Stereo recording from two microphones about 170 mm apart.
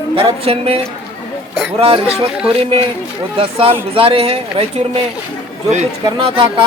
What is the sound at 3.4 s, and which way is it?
Speech, 35° right (ahead or behind).